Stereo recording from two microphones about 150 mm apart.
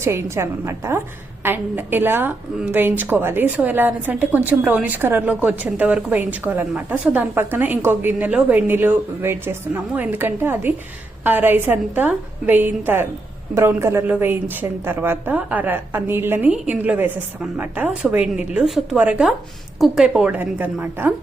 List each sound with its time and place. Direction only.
0.0 s a woman's voice: 15° right (ahead or behind)